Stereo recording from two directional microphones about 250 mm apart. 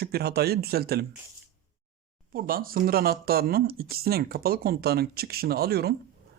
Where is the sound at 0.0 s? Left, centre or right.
Right.